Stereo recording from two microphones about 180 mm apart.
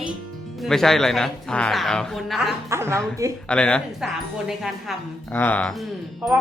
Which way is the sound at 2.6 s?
15° right (ahead or behind).